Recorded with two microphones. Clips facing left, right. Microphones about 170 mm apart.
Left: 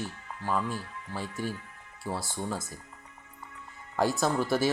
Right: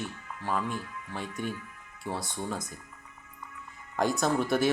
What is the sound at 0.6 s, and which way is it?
Speech, 30° left (ahead or behind).